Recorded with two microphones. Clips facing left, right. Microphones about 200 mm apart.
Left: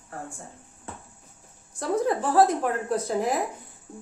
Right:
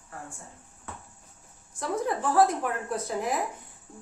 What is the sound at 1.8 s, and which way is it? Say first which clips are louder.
A woman's voice: left 4 dB; 35° left (ahead or behind).